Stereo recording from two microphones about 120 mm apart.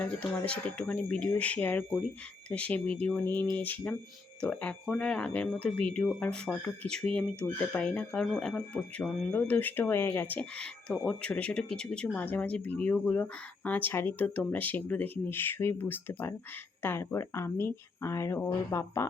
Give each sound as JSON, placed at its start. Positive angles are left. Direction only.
{"t": 0.0, "sound": "speech", "side_deg": 10}